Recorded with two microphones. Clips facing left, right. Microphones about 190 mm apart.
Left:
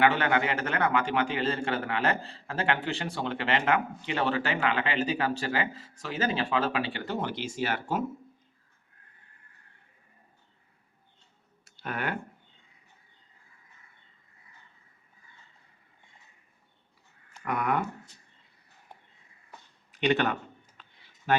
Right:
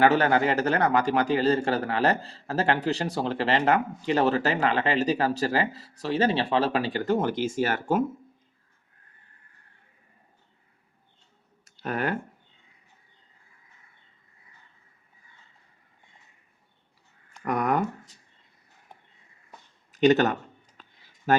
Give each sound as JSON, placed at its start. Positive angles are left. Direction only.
{"t": 0.0, "sound": "a man's voice", "side_deg": -40}
{"t": 11.6, "sound": "clicking", "side_deg": -40}
{"t": 17.4, "sound": "speech", "side_deg": -40}
{"t": 19.9, "sound": "speech", "side_deg": -40}